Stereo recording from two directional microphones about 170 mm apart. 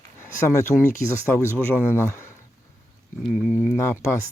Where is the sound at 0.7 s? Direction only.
5° left (ahead or behind).